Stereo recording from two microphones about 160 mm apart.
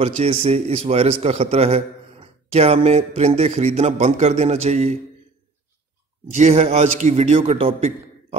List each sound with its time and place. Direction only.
0.0 s a man's voice: 40° right (ahead or behind)
6.3 s a man's voice: 40° right (ahead or behind)